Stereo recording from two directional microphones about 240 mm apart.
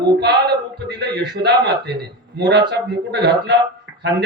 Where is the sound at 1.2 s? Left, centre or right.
Right.